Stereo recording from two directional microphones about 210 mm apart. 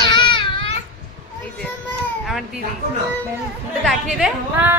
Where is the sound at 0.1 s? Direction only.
20° left (ahead or behind).